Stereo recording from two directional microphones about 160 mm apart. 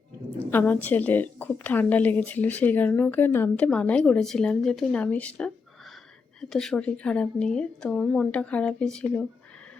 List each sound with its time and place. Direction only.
0.3 s a woman's voice: 10° left (ahead or behind)